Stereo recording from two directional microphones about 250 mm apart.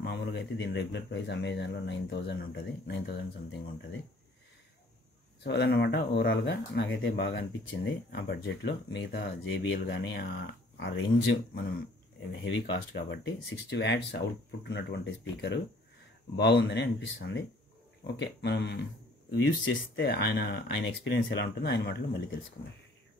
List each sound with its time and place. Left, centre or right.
0.0 s speech: left
5.4 s speech: left
12.3 s speech: left